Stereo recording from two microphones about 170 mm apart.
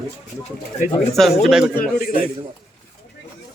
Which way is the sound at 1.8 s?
60° left (ahead or behind).